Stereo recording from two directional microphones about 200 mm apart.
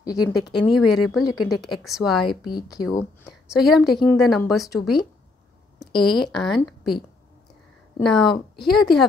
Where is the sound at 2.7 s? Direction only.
20° left (ahead or behind).